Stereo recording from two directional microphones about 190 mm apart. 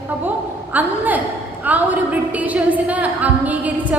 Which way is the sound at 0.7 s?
10° right (ahead or behind).